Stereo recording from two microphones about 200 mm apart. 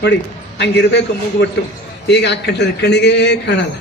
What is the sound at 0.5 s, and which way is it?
Speech, 60° left (ahead or behind).